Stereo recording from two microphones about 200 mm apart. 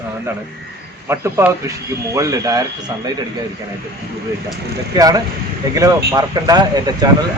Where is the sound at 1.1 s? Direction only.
15° right (ahead or behind).